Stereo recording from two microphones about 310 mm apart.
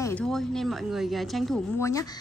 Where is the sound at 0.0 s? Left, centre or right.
Centre.